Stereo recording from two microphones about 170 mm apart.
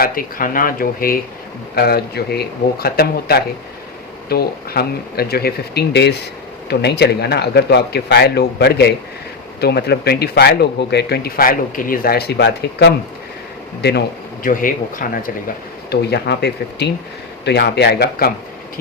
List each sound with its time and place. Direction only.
0.0 s speech: 55° left (ahead or behind); by 12.9 s 80° left
14.4 s speech: 55° left (ahead or behind)
15.9 s speech: 75° left (ahead or behind)